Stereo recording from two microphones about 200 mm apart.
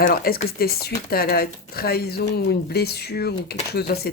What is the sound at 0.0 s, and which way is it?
Speech, 45° left (ahead or behind).